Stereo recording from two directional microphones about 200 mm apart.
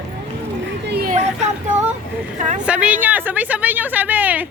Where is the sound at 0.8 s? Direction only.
55° right (ahead or behind).